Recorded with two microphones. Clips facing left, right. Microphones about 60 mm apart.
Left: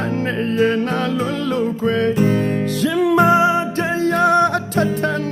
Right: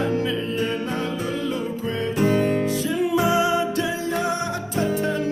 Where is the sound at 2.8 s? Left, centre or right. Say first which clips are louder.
Left 7 dB; left.